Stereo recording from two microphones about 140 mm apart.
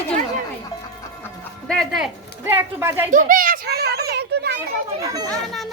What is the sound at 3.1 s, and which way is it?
Speech, 75° right (ahead or behind).